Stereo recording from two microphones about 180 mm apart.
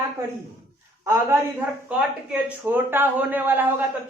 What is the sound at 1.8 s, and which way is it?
A man's voice, 5° right (ahead or behind).